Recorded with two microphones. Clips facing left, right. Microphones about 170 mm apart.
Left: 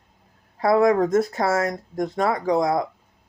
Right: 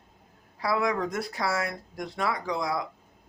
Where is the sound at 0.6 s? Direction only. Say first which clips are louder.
Left 10 dB; 50° left (ahead or behind).